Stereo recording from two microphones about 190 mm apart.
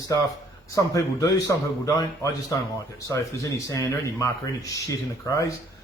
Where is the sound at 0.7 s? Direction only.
15° left (ahead or behind).